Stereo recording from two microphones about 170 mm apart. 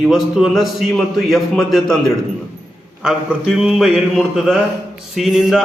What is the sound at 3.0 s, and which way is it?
A man's voice, centre (ahead or behind).